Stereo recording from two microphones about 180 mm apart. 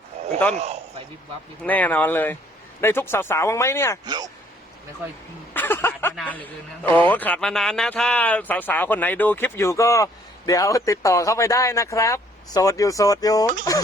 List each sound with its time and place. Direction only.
0.5 s a man's voice: 35° right (ahead or behind)
1.6 s speech: 10° left (ahead or behind)
4.0 s speech: 20° right (ahead or behind)
5.5 s speech: 10° left (ahead or behind)